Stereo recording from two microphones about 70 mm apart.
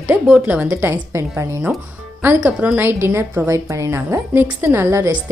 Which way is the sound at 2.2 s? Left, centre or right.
Right.